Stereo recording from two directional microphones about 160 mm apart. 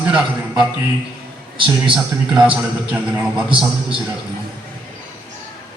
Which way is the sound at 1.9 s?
5° right (ahead or behind).